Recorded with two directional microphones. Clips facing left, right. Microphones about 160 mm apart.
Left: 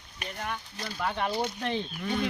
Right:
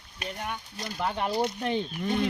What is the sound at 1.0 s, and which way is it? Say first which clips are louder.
Speech: right 2 dB; 15° right (ahead or behind).